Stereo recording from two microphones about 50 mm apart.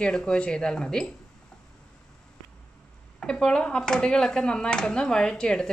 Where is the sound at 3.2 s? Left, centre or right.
Centre.